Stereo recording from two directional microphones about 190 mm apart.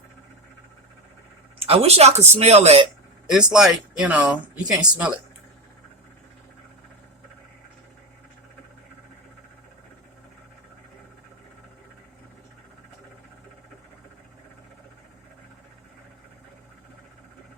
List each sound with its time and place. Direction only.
1.5 s speech: 30° right (ahead or behind)
3.3 s speech: 5° right (ahead or behind)